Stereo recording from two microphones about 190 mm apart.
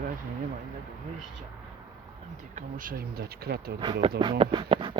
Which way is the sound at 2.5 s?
45° right (ahead or behind).